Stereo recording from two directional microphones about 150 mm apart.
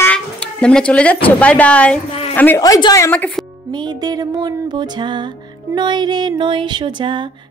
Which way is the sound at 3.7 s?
30° right (ahead or behind).